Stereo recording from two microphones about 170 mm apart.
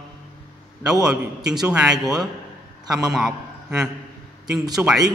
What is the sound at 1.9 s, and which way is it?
Speech, 20° right (ahead or behind).